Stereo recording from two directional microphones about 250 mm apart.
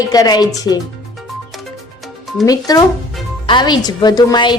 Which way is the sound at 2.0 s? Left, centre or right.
Centre.